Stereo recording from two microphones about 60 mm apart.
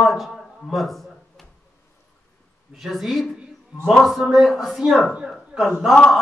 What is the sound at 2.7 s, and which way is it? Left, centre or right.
A man's voice, centre.